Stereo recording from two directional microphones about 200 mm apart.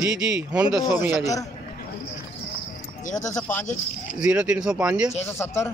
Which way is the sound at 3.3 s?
10° left (ahead or behind).